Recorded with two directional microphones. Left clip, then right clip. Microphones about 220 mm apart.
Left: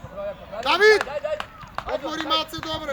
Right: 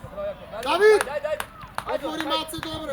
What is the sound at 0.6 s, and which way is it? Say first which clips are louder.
Speech: left 1 dB; 20° left (ahead or behind).